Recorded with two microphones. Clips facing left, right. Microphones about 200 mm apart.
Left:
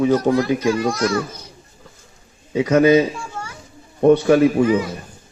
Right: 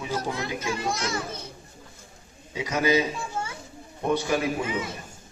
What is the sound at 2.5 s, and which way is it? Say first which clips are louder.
Speech: left 11 dB; 60° left (ahead or behind).